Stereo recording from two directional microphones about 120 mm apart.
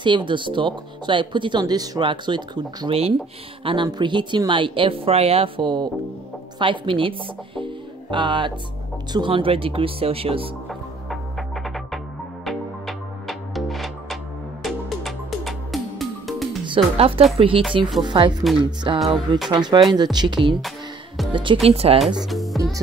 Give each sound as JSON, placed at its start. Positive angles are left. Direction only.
{"t": 0.0, "sound": "speech", "side_deg": -40}
{"t": 2.9, "sound": "speech", "side_deg": -55}
{"t": 3.6, "sound": "speech", "side_deg": -40}
{"t": 10.7, "sound": "music", "side_deg": 0}
{"t": 16.6, "sound": "speech", "side_deg": -50}
{"t": 18.9, "sound": "music", "side_deg": 0}
{"t": 19.5, "sound": "speech", "side_deg": -40}
{"t": 21.6, "sound": "speech", "side_deg": -55}
{"t": 22.2, "sound": "speech", "side_deg": 0}